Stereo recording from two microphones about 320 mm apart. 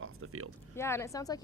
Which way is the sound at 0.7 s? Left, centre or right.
Centre.